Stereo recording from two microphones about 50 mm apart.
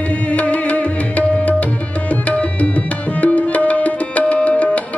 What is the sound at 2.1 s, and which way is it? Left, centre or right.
Tabla, left.